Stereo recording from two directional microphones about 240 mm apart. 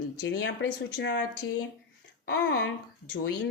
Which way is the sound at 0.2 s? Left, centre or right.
Left.